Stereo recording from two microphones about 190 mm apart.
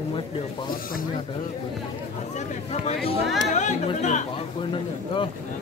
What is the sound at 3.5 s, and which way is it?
Music, 40° left (ahead or behind).